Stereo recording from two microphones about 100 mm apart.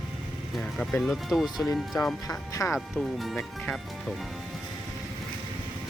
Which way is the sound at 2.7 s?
Centre (ahead or behind).